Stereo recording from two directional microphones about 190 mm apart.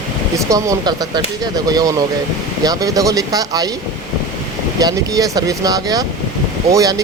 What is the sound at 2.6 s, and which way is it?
Speech, 20° right (ahead or behind).